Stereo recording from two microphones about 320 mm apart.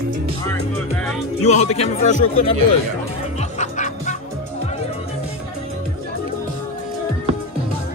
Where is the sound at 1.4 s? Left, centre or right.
Left.